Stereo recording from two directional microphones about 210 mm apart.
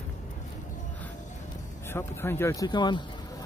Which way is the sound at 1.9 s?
10° left (ahead or behind).